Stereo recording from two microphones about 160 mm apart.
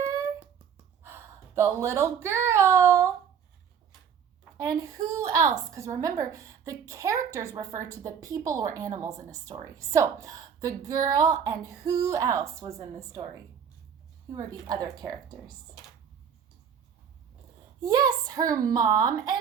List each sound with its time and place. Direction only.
0.0 s a sound: 20° right (ahead or behind)
1.0 s speech: 15° right (ahead or behind)
4.5 s a woman's voice: 20° right (ahead or behind)
17.8 s a woman's voice: 25° right (ahead or behind)